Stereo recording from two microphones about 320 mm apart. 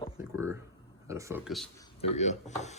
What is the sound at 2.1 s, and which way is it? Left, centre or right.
Speech, left.